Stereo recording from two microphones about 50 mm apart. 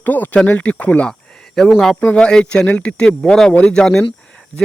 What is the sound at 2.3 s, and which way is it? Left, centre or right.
Speech, centre.